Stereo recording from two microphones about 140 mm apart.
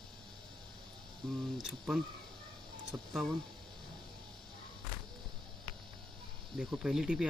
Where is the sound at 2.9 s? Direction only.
20° right (ahead or behind).